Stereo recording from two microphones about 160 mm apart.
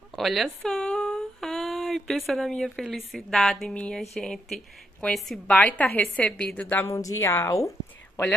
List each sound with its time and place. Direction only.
0.1 s speech: centre (ahead or behind)
0.6 s a sound: 5° left (ahead or behind)
3.1 s a woman's voice: centre (ahead or behind); by 7.7 s 20° left (ahead or behind)